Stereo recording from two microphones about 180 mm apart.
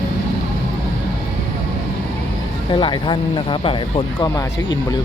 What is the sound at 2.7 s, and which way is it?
Speech, 30° left (ahead or behind).